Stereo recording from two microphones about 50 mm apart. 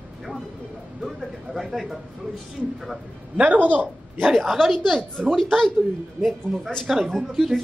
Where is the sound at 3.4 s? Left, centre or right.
Right.